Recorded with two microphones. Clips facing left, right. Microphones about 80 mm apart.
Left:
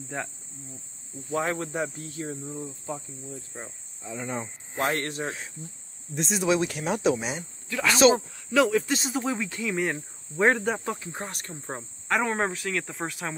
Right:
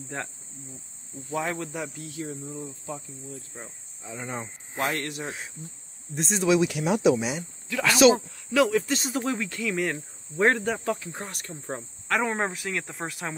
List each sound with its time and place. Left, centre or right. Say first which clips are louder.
0.1 s speech: left 1 dB; centre
1.3 s speech: left 2 dB; left
3.5 s speech: left 2 dB; centre
4.2 s speech: left 2 dB; centre
4.7 s speech: left 2 dB; left
6.1 s speech: even; centre
6.6 s speech: right 3 dB; left
9.0 s speech: even; centre
10.7 s speech: right 1 dB; left
11.6 s speech: right 3 dB; centre
12.2 s speech: left 1 dB; centre